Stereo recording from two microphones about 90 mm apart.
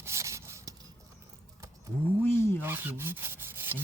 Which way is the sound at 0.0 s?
30° right (ahead or behind).